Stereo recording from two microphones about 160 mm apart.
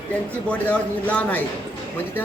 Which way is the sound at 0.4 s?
10° left (ahead or behind).